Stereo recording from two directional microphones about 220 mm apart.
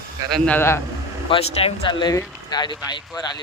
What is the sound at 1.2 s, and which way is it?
Speech, 25° left (ahead or behind).